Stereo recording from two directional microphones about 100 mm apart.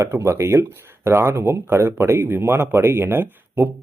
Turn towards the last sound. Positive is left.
turn(degrees=-20)  # may be behind; listen again after turning